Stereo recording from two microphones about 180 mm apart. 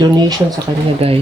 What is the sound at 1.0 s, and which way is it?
Speech, 35° right (ahead or behind).